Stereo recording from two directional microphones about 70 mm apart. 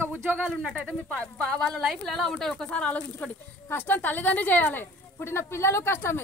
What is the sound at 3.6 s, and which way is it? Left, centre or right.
A woman's voice, left.